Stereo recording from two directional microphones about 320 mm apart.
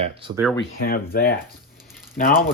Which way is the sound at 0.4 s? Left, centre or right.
Centre.